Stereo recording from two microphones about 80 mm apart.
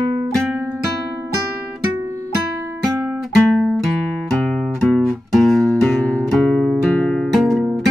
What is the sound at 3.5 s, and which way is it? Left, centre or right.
Music, centre.